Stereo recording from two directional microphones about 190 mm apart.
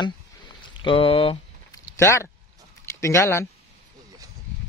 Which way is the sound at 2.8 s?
15° left (ahead or behind).